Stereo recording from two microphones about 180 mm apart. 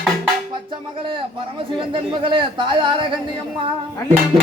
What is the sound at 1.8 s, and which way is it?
Speech, 30° right (ahead or behind).